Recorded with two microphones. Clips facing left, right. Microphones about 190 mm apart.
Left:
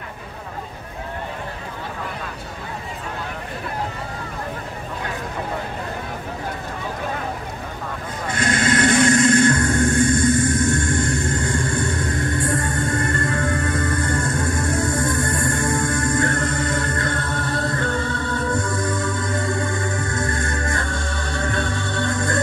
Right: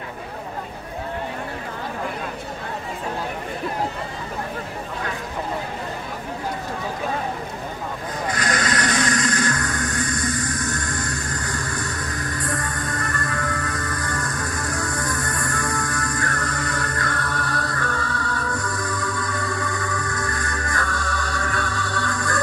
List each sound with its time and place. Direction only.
8.3 s vehicle: 25° left (ahead or behind)